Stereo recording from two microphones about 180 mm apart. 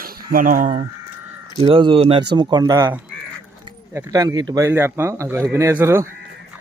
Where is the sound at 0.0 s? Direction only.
50° right (ahead or behind).